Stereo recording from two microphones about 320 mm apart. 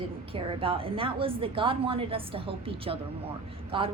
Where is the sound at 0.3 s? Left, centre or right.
Centre.